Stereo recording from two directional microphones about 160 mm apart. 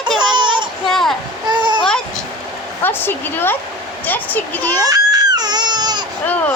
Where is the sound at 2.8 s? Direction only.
15° left (ahead or behind).